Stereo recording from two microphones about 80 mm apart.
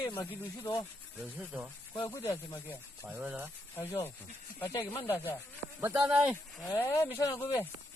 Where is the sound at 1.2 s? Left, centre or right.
Centre.